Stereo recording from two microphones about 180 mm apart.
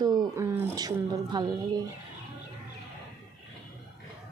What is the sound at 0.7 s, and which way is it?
Speech, 20° right (ahead or behind).